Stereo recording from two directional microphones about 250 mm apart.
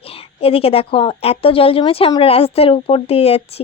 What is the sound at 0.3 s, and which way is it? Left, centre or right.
Speech, left.